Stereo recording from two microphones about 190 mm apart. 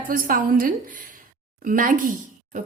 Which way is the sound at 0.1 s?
45° right (ahead or behind).